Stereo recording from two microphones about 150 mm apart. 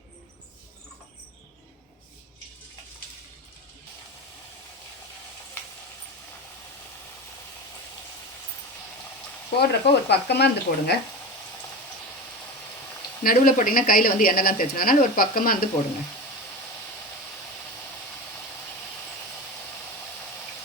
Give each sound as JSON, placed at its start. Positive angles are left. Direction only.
{"t": 9.6, "sound": "speech", "side_deg": 90}
{"t": 13.2, "sound": "speech", "side_deg": 65}